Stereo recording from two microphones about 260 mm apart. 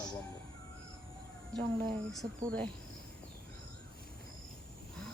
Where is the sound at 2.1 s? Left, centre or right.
Centre.